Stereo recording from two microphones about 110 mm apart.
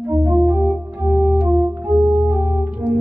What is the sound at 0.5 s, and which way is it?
Organ, 15° right (ahead or behind).